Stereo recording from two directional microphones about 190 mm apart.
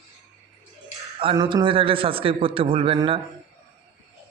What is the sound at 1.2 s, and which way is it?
A man's voice, 25° right (ahead or behind).